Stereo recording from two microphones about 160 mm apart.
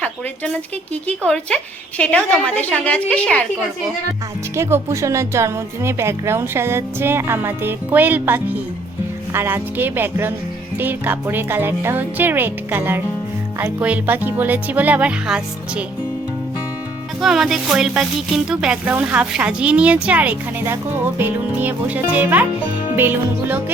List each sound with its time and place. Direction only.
0.0 s a sound: 5° left (ahead or behind)
1.0 s a woman's voice: 5° left (ahead or behind)
4.5 s speech: 15° right (ahead or behind)
17.2 s speech: centre (ahead or behind)